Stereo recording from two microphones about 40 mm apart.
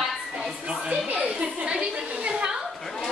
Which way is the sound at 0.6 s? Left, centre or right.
Right.